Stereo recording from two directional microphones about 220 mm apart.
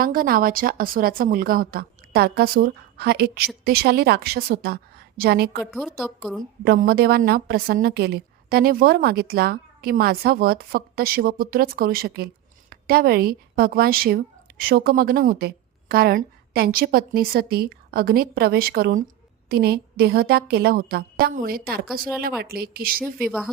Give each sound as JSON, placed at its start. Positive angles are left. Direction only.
{"t": 0.0, "sound": "a woman's voice", "side_deg": -40}
{"t": 5.7, "sound": "a woman's voice", "side_deg": 0}
{"t": 6.4, "sound": "a woman's voice", "side_deg": -40}